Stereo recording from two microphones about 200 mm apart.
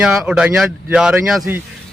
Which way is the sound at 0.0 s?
5° right (ahead or behind).